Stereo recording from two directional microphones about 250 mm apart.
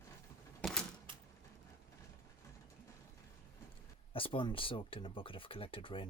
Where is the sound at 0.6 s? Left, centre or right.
Centre.